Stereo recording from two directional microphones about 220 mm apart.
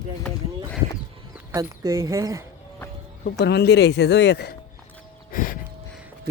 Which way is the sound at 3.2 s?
50° left (ahead or behind).